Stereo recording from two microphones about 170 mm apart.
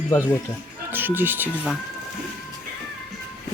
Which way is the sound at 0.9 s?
10° right (ahead or behind).